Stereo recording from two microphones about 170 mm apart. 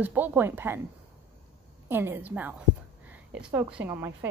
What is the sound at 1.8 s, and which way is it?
Speech, 10° right (ahead or behind).